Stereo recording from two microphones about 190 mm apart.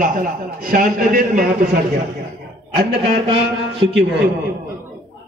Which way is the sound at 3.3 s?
30° right (ahead or behind).